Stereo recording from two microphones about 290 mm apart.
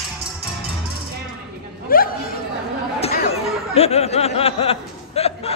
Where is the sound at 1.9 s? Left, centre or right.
Left.